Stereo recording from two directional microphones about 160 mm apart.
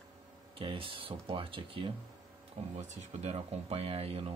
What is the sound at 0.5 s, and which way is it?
Speech, 35° right (ahead or behind).